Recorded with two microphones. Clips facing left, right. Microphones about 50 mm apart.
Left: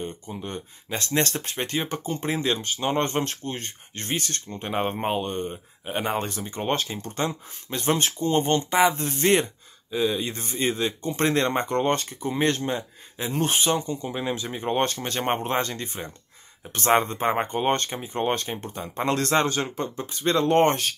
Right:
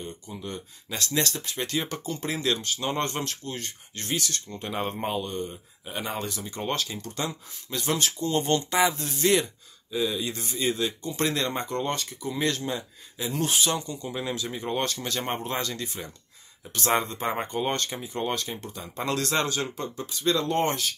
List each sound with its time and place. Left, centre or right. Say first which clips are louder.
0.0 s speech: left 4 dB; left